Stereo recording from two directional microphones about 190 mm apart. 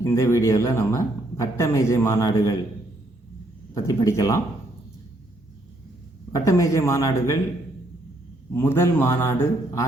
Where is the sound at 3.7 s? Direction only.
15° left (ahead or behind).